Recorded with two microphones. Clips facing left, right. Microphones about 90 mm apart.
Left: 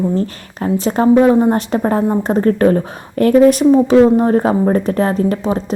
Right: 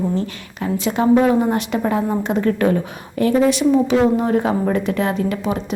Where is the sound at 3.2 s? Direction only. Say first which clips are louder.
Left 6 dB; 50° left (ahead or behind).